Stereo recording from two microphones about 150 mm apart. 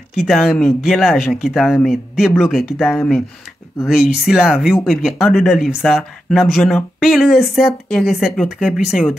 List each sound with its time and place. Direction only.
0.1 s speech: centre (ahead or behind)